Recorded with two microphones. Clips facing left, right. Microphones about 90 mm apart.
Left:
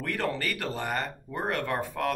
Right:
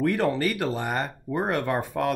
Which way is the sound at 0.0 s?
20° right (ahead or behind).